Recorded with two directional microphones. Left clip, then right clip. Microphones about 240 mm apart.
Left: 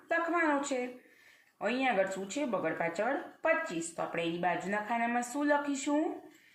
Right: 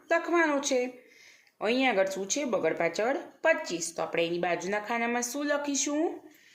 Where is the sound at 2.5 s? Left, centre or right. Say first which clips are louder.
Right 6 dB; right.